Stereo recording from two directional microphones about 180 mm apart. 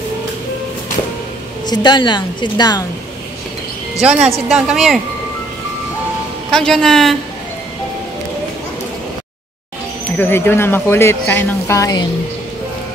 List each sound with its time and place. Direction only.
1.7 s a woman's voice: 25° left (ahead or behind)
4.0 s a woman's voice: 5° right (ahead or behind)
6.5 s a woman's voice: 5° left (ahead or behind)
10.1 s speech: 10° left (ahead or behind)